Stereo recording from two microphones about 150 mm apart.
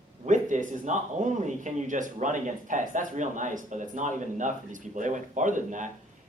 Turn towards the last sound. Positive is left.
turn(degrees=-55)  # may be behind; listen again after turning